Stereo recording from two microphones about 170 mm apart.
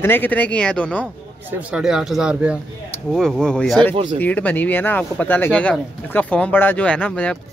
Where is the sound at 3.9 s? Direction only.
35° right (ahead or behind).